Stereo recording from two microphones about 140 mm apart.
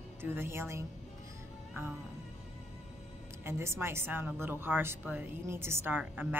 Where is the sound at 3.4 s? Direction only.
20° right (ahead or behind).